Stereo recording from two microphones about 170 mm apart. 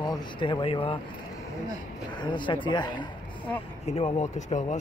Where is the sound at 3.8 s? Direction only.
40° left (ahead or behind).